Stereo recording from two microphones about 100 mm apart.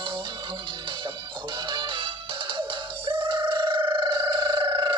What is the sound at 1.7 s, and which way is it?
Music, 50° right (ahead or behind).